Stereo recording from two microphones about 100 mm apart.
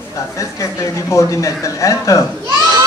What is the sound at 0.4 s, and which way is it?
Speech, 35° left (ahead or behind).